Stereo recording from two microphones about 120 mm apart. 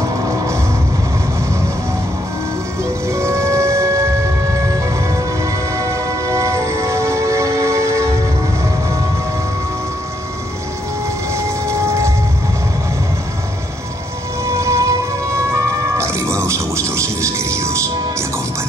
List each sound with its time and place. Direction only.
3.1 s music: 25° right (ahead or behind)
5.4 s music: 25° right (ahead or behind)
11.3 s train: 25° right (ahead or behind)
14.4 s music: 25° right (ahead or behind)